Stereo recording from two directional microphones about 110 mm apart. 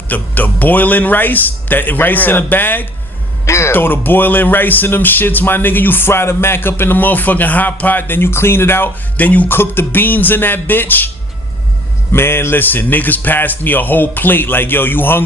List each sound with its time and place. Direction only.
0.1 s speech: 15° left (ahead or behind)
12.1 s speech: 20° left (ahead or behind)